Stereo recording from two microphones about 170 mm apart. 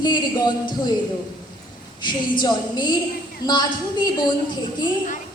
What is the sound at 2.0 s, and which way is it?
A woman's voice, 25° left (ahead or behind).